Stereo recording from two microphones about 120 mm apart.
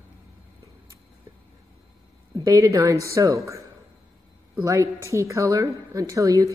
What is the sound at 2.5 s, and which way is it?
Speech, 25° right (ahead or behind).